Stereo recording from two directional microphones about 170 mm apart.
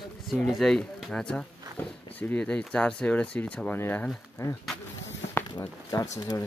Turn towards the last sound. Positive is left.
turn(degrees=20)  # may be behind; listen again after turning